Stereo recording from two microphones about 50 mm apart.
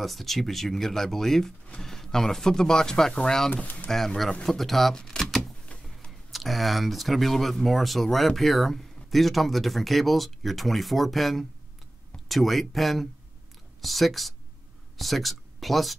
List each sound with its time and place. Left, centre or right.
0.0 s speech: centre
3.6 s speech: left
3.9 s speech: centre
5.2 s a sound: centre
6.3 s speech: centre